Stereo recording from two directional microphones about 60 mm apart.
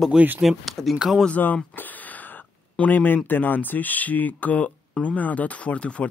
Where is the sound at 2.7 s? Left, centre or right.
Left.